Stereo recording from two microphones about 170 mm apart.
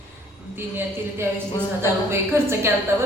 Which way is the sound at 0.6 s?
15° right (ahead or behind).